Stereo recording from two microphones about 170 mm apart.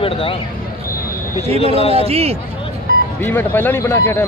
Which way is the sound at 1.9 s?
35° right (ahead or behind).